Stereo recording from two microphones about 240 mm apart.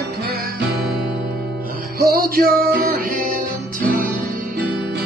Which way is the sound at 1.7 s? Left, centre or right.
Right.